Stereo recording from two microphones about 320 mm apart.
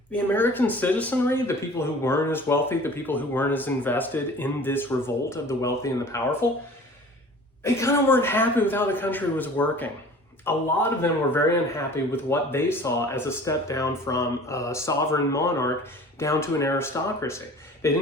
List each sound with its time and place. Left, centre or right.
0.1 s speech: centre
7.6 s speech: centre